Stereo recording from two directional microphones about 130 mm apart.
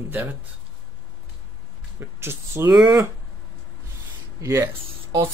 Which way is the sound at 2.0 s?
20° right (ahead or behind).